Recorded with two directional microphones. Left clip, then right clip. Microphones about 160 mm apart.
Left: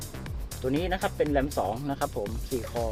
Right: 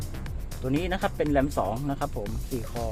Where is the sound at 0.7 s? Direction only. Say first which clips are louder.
Right 1 dB; centre (ahead or behind).